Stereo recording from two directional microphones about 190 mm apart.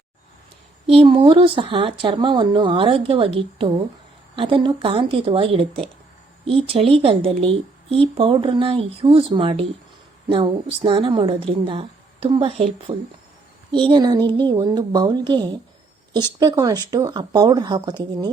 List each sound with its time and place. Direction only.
0.9 s speech: 30° right (ahead or behind)